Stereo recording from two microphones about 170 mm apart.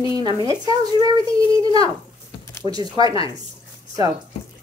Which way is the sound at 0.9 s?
25° right (ahead or behind).